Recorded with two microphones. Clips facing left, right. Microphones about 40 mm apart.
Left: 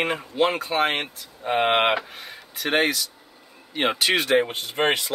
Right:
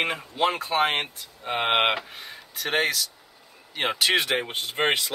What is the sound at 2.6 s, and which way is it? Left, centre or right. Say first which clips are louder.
Speech: left 3 dB; centre.